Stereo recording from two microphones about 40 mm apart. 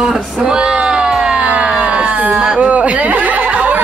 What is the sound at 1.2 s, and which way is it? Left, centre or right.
Siren, centre.